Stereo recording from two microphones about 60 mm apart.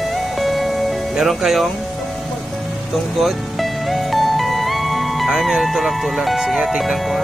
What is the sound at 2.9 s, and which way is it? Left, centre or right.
Music, centre.